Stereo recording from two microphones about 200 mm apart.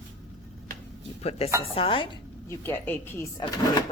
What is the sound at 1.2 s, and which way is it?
Speech, 30° left (ahead or behind).